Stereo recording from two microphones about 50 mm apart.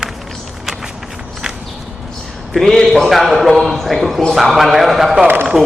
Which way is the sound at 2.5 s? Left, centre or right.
Centre.